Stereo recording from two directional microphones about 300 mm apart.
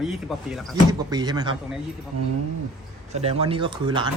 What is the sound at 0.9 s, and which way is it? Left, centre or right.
Speech, centre.